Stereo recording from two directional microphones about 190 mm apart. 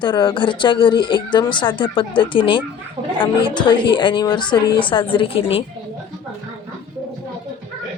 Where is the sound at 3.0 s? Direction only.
40° right (ahead or behind).